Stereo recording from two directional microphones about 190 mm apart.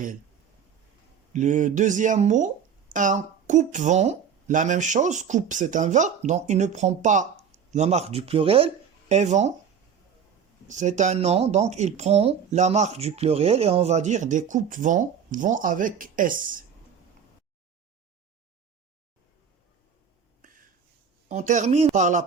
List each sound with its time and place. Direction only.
1.3 s speech: 40° right (ahead or behind)
10.7 s speech: 40° right (ahead or behind)
21.2 s speech: 40° right (ahead or behind)